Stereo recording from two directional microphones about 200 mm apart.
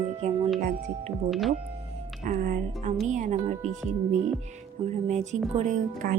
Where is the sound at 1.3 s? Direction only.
Centre (ahead or behind).